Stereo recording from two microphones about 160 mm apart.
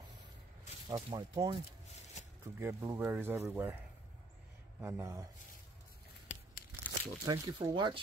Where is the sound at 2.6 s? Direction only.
15° right (ahead or behind).